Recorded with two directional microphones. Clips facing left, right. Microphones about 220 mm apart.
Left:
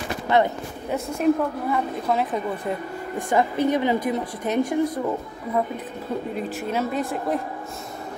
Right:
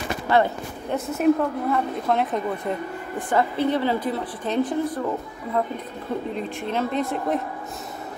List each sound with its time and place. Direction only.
0.3 s speech: 20° left (ahead or behind)
0.8 s a woman's voice: centre (ahead or behind)
3.3 s a woman's voice: 15° left (ahead or behind)